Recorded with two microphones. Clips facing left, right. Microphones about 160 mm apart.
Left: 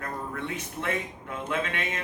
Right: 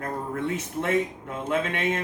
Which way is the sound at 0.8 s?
45° right (ahead or behind).